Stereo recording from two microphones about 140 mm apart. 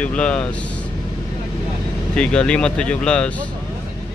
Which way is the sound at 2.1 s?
5° left (ahead or behind).